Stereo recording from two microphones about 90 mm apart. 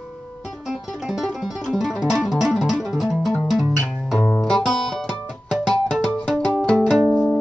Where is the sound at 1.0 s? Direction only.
5° right (ahead or behind).